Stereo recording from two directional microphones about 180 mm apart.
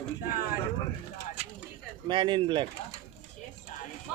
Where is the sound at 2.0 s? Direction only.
25° right (ahead or behind).